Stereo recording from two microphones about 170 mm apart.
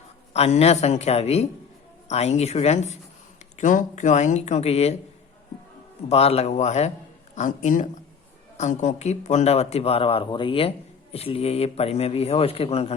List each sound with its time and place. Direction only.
0.3 s speech: 40° left (ahead or behind)
6.1 s speech: 35° left (ahead or behind)